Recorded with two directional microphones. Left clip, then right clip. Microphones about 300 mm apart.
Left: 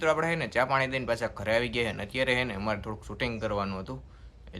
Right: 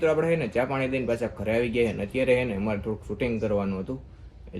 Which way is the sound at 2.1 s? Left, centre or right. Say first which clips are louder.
Right 4 dB; centre.